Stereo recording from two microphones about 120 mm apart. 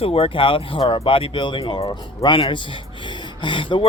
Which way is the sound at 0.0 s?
55° left (ahead or behind).